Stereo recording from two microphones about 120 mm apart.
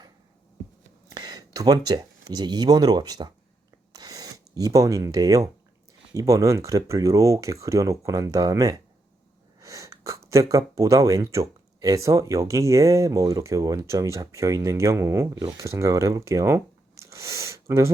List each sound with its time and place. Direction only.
1.1 s speech: 35° right (ahead or behind)
3.9 s a sound: 30° right (ahead or behind)
6.1 s speech: 25° right (ahead or behind)